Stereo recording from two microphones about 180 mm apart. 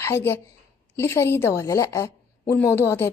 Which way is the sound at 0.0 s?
15° left (ahead or behind).